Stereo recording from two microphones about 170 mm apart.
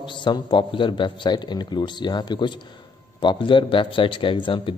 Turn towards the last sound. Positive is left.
turn(degrees=30)  # may be behind; listen again after turning